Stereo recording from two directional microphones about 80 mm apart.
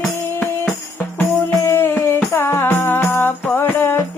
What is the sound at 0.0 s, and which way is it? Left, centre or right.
Music, centre.